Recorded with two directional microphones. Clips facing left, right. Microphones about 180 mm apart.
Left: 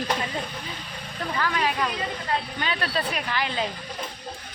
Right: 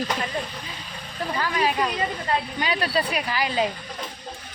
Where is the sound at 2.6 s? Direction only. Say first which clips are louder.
Right 3 dB; 10° right (ahead or behind).